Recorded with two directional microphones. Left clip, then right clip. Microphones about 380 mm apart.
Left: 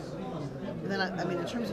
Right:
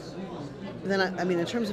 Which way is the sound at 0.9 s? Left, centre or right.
Right.